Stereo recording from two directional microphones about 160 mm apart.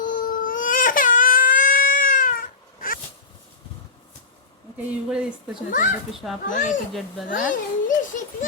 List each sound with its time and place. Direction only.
0.0 s baby cry: 55° left (ahead or behind)
5.0 s speech: 5° right (ahead or behind)
5.7 s a child's voice: 55° left (ahead or behind)
6.1 s speech: centre (ahead or behind)
7.3 s a child's voice: 55° left (ahead or behind)